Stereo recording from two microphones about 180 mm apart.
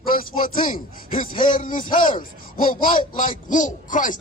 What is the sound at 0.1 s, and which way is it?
A man's voice, 50° left (ahead or behind).